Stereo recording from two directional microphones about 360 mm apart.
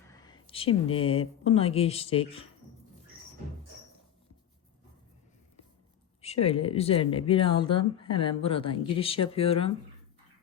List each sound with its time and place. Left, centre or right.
0.1 s speech: centre
6.2 s speech: centre